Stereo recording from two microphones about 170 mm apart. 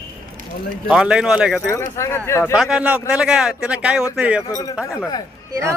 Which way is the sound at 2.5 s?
5° right (ahead or behind).